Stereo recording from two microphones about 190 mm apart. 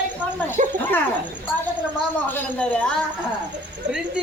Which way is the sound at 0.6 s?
40° right (ahead or behind).